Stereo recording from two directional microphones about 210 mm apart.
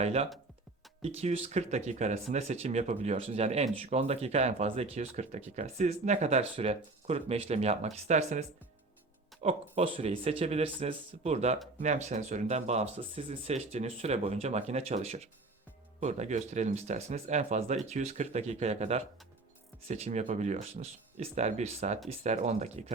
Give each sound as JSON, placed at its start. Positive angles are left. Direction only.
{"t": 0.0, "sound": "speech", "side_deg": -30}